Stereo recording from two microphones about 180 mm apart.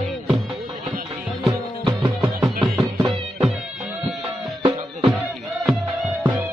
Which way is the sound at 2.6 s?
5° right (ahead or behind).